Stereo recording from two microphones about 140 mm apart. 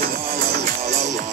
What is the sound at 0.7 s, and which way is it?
Music, 55° right (ahead or behind).